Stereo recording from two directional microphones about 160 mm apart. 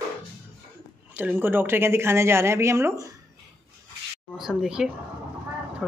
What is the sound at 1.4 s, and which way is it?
Speech, 15° right (ahead or behind).